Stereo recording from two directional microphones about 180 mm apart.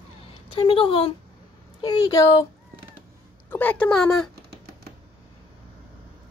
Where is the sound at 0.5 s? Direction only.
30° left (ahead or behind).